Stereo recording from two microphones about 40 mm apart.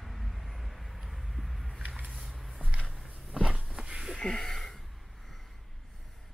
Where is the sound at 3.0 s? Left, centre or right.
Centre.